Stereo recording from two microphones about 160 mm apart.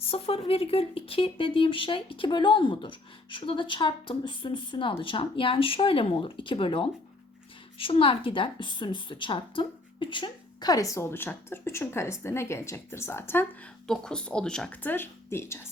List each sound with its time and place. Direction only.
0.0 s a woman's voice: 40° left (ahead or behind); by 13.5 s 15° left (ahead or behind)
13.8 s a woman's voice: 5° left (ahead or behind)